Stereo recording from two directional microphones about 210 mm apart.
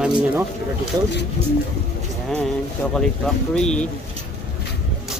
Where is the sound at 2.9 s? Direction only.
5° left (ahead or behind).